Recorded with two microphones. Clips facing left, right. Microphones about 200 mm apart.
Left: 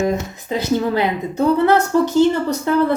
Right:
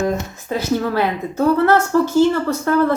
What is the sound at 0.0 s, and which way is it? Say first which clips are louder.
A woman's voice: left 1 dB; 15° left (ahead or behind).